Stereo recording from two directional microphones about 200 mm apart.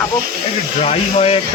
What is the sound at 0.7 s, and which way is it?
Speech, 30° left (ahead or behind).